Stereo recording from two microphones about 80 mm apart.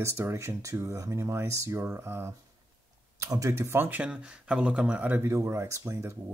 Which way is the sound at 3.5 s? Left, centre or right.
Right.